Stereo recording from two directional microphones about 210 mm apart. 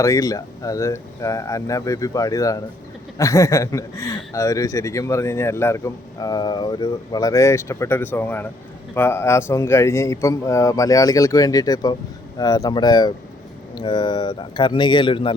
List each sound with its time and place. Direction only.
0.0 s a man's voice: 15° left (ahead or behind)